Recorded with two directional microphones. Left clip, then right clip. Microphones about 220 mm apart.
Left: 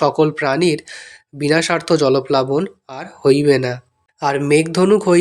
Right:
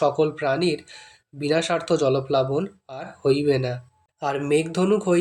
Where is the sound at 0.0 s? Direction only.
25° left (ahead or behind).